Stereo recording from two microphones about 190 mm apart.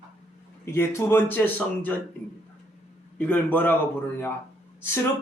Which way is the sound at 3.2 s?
10° left (ahead or behind).